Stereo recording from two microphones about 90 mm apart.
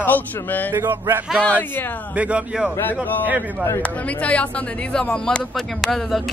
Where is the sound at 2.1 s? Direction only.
15° right (ahead or behind).